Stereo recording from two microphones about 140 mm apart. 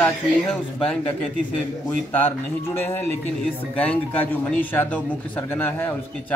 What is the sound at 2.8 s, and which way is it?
Speech, 15° left (ahead or behind).